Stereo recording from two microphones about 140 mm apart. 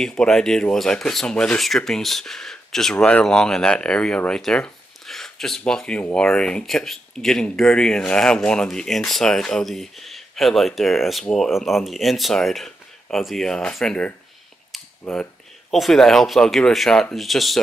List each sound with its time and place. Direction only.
0.0 s speech: 5° left (ahead or behind)